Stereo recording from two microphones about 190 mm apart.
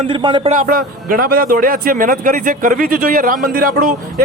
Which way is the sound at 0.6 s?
50° right (ahead or behind).